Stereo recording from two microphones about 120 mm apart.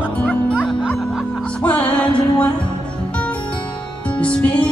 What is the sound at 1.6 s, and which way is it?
Music, 10° left (ahead or behind).